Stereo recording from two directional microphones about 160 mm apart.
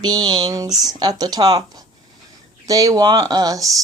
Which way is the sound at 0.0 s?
25° right (ahead or behind).